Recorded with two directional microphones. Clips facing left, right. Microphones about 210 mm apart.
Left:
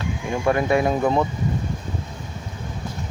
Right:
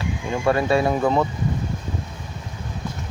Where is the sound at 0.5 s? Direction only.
20° left (ahead or behind).